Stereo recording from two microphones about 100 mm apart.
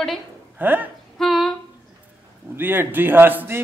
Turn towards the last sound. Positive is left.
turn(degrees=-20)  # may be behind; listen again after turning